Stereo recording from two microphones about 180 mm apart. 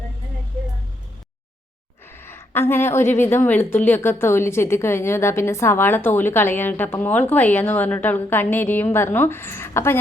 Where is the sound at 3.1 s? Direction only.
10° left (ahead or behind).